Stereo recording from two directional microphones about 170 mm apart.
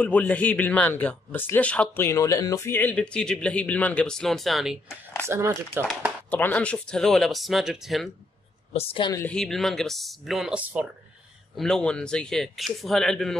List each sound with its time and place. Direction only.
0.0 s a man's voice: 10° left (ahead or behind)
5.2 s speech: 15° right (ahead or behind)
6.3 s speech: 10° left (ahead or behind)
8.7 s a woman's voice: 35° left (ahead or behind)
9.1 s speech: 10° left (ahead or behind); by 10.9 s 10° right (ahead or behind)
11.5 s speech: 5° left (ahead or behind)